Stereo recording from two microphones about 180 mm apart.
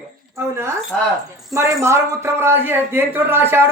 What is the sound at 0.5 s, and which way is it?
A man's voice, 15° right (ahead or behind).